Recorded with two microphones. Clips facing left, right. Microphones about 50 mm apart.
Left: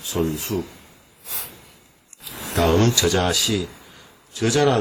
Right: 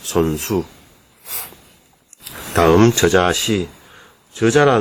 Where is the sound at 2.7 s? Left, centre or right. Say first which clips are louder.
Right 7 dB; right.